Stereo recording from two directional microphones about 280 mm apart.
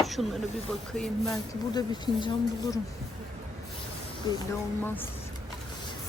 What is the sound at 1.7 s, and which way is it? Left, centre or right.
A woman's voice, centre.